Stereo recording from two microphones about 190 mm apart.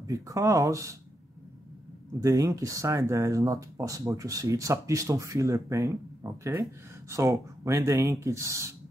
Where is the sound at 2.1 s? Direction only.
20° right (ahead or behind).